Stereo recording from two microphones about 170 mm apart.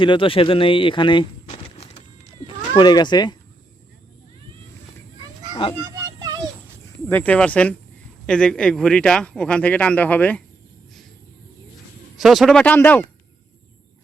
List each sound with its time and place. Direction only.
0.0 s speech: 30° left (ahead or behind)
2.7 s speech: 25° left (ahead or behind)
5.8 s a sound: 20° right (ahead or behind)
7.1 s a man's voice: 10° left (ahead or behind)
12.1 s speech: centre (ahead or behind)